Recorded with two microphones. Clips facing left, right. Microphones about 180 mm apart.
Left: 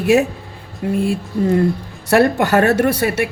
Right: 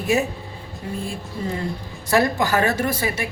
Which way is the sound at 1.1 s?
65° left (ahead or behind).